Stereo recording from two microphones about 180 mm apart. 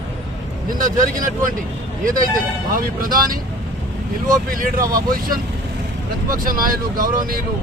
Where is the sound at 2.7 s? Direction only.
50° right (ahead or behind).